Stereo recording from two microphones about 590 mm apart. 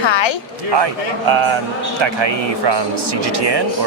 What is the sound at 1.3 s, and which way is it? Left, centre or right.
Speech, right.